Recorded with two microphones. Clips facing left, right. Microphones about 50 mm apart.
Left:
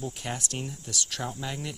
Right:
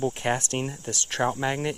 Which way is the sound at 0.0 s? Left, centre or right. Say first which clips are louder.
Right 9 dB; right.